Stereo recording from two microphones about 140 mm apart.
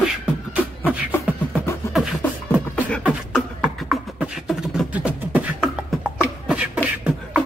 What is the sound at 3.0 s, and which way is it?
Beatboxing, 5° right (ahead or behind).